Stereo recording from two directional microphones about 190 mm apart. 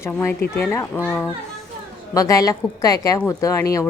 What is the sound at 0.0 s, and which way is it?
A woman's voice, 15° left (ahead or behind).